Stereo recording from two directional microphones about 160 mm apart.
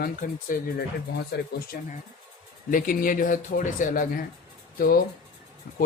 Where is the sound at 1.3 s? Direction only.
90° left.